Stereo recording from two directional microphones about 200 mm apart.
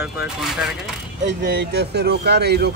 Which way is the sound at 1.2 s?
60° right (ahead or behind).